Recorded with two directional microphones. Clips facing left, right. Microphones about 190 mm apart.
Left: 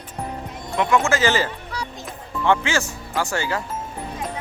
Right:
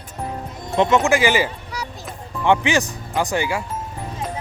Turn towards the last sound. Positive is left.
turn(degrees=-15)  # may be behind; listen again after turning